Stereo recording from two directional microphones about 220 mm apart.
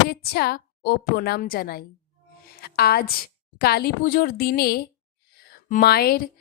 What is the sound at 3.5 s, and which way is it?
A woman's voice, 45° left (ahead or behind).